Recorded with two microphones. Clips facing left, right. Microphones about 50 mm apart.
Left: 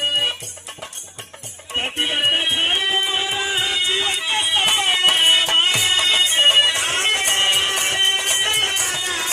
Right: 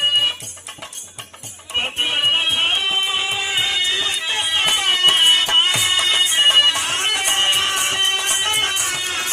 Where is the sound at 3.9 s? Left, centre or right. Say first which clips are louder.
Left 1 dB; left.